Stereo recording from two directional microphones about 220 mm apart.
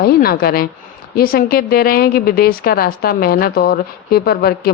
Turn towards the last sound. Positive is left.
turn(degrees=45)  # may be behind; listen again after turning